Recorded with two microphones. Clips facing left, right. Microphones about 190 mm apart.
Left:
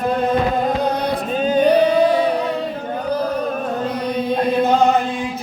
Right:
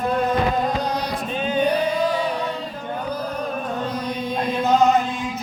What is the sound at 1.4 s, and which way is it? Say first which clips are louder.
Singing: left 5 dB; 40° left (ahead or behind).